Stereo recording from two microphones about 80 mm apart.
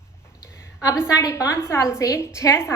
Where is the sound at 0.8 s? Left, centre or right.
Left.